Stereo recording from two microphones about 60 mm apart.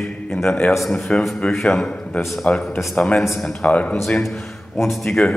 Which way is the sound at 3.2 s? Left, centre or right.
Centre.